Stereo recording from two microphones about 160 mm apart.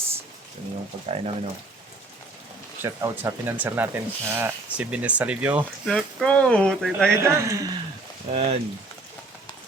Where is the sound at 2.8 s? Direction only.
20° right (ahead or behind).